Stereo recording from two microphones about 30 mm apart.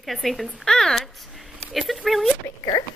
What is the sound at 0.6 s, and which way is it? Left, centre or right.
Speech, centre.